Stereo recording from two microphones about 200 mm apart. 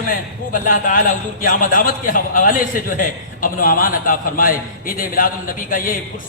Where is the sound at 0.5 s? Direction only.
40° left (ahead or behind).